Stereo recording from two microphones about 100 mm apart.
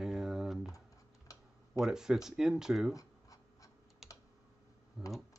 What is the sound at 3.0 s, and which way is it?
Writing, 35° left (ahead or behind).